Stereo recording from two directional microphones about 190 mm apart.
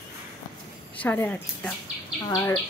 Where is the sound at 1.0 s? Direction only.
10° left (ahead or behind).